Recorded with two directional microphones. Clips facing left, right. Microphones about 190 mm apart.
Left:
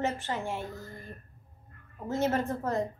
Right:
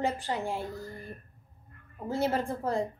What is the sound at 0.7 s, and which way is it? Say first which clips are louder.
Speech: right 3 dB; 15° right (ahead or behind).